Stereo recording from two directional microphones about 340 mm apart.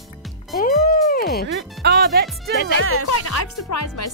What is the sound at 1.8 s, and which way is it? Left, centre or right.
Speech, right.